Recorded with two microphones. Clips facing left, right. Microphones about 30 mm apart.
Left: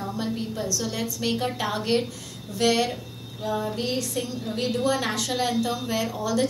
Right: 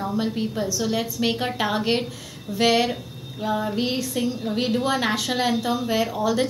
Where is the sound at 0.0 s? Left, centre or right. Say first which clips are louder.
Right 4 dB; centre.